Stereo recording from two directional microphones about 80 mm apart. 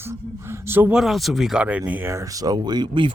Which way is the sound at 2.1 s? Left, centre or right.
Right.